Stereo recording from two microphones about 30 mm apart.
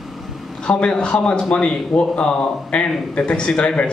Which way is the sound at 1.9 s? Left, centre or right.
Centre.